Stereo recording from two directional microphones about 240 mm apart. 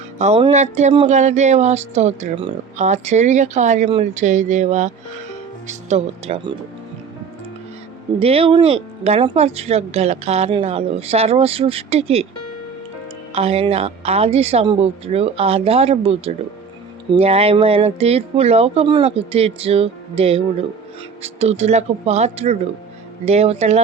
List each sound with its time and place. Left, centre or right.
0.2 s speech: right
8.2 s speech: right
13.3 s speech: right